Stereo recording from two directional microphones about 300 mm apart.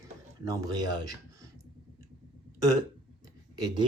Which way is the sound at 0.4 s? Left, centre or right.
Centre.